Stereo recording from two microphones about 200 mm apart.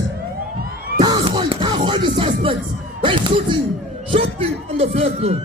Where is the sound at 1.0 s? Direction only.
20° right (ahead or behind).